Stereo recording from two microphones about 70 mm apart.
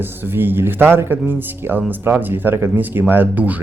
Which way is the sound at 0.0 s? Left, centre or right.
Right.